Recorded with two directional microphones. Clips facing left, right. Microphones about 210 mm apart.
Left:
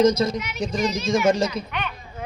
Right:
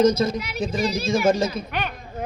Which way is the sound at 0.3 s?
35° right (ahead or behind).